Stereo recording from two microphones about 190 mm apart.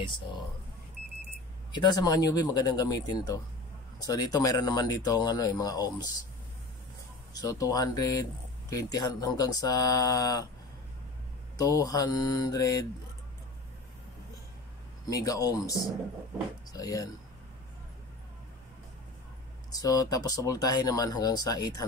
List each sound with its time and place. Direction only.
0.0 s a sound: 25° left (ahead or behind)
1.8 s speech: 20° left (ahead or behind)
7.3 s speech: 20° left (ahead or behind)
11.5 s speech: 20° left (ahead or behind)
15.0 s speech: 20° left (ahead or behind)
19.7 s speech: 20° left (ahead or behind)